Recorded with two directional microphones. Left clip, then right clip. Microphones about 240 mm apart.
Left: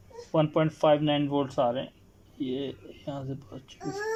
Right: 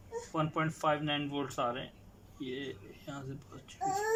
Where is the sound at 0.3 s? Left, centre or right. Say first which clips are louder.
Left 9 dB; left.